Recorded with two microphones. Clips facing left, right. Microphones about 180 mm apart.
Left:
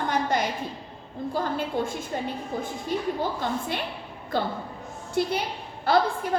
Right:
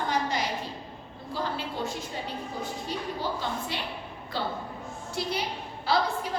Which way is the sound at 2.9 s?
50° left (ahead or behind).